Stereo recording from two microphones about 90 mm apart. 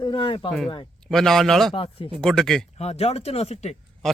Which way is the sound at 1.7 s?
90° left.